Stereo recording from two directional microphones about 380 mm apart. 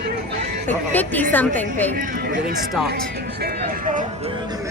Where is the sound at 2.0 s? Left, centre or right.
Right.